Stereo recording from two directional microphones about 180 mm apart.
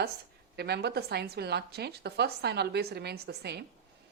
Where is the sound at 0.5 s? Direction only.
65° right (ahead or behind).